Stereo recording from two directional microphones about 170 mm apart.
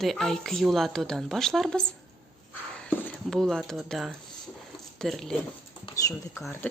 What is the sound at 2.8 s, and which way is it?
Speech, 5° left (ahead or behind).